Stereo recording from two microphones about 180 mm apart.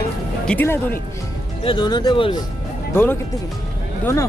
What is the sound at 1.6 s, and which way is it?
Speech, 25° left (ahead or behind).